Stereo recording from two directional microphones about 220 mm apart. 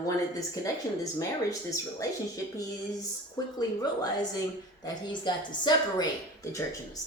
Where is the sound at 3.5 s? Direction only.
20° left (ahead or behind).